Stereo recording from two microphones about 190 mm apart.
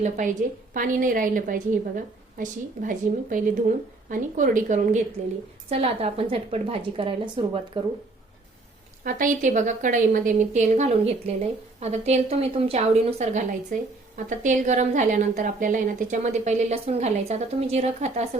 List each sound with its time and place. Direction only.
0.0 s a woman's voice: 45° right (ahead or behind)
9.0 s a woman's voice: 45° right (ahead or behind)